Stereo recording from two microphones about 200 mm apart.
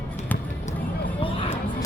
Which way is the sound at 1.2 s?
25° left (ahead or behind).